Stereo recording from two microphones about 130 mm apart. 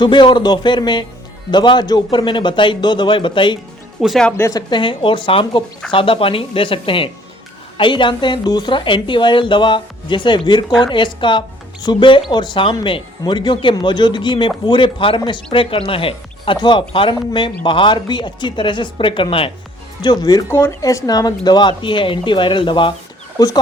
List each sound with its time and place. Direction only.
0.0 s speech: 35° left (ahead or behind)
4.0 s speech: 5° left (ahead or behind)
4.4 s a woman's voice: 25° left (ahead or behind)
4.7 s speech: 40° left (ahead or behind)
20.5 s speech: 20° left (ahead or behind); by 23.0 s 40° left (ahead or behind)